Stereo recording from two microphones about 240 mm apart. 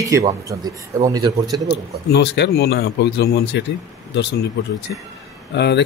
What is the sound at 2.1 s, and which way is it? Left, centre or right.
Speech, left.